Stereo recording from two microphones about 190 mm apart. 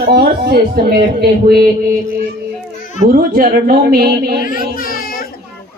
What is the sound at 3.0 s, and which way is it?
A woman's voice, 50° right (ahead or behind).